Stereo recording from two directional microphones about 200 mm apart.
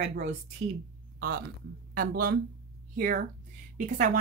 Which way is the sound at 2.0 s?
45° right (ahead or behind).